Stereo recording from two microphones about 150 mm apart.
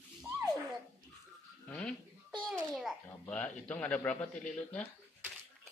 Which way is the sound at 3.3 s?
10° left (ahead or behind).